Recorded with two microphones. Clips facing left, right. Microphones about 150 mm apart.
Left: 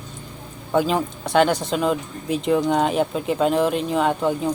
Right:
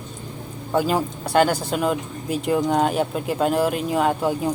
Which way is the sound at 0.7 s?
5° right (ahead or behind).